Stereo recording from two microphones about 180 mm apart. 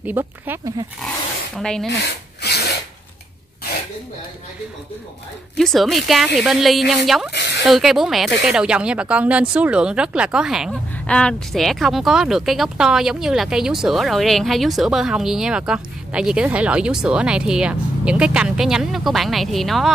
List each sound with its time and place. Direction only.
0.0 s speech: 10° right (ahead or behind)
1.6 s speech: 5° left (ahead or behind)
2.4 s filing: 65° left (ahead or behind)
5.6 s speech: centre (ahead or behind)